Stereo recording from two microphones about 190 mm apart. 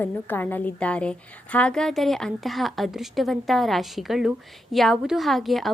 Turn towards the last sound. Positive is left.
turn(degrees=0)  # may be behind; listen again after turning